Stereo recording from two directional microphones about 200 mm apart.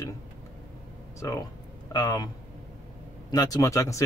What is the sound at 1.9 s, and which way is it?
Speech, 20° left (ahead or behind).